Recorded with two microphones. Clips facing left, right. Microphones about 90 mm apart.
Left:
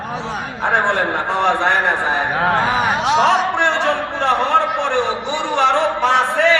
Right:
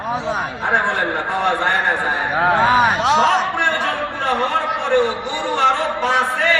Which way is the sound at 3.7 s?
80° left.